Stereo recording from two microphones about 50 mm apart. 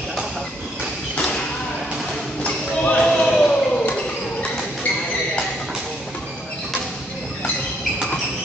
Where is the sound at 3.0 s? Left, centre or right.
Centre.